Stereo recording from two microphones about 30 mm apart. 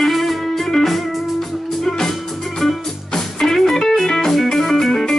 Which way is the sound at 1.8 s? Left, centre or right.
Centre.